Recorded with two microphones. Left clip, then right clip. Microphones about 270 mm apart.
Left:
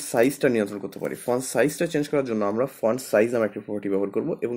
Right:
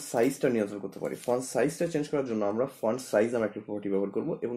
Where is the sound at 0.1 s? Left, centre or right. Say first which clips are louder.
Left 6 dB; left.